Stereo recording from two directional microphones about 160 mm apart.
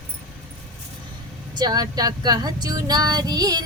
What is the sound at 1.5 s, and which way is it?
Speech, 25° right (ahead or behind).